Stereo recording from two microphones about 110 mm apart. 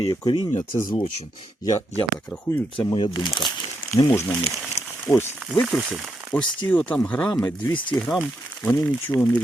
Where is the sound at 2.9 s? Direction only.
40° left (ahead or behind).